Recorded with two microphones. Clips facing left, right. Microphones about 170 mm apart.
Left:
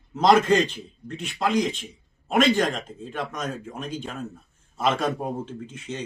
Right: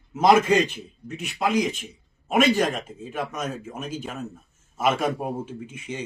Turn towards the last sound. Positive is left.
turn(degrees=-10)  # may be behind; listen again after turning